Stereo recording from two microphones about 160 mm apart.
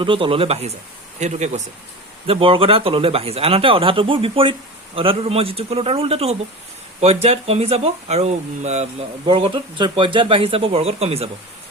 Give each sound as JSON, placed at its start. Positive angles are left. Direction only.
{"t": 0.0, "sound": "speech", "side_deg": -35}
{"t": 2.2, "sound": "speech", "side_deg": -35}
{"t": 9.2, "sound": "speech", "side_deg": -30}